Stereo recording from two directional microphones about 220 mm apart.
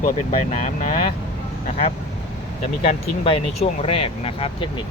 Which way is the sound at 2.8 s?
25° left (ahead or behind).